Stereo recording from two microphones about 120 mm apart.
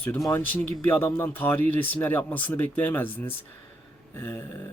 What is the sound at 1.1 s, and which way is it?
Speech, 15° left (ahead or behind).